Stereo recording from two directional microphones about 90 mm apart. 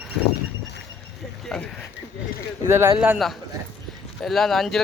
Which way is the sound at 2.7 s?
30° right (ahead or behind).